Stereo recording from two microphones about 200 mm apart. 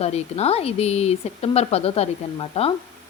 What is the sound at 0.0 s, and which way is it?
Speech, 30° left (ahead or behind).